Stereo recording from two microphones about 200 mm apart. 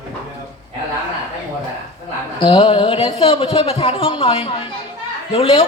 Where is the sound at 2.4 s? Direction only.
25° left (ahead or behind).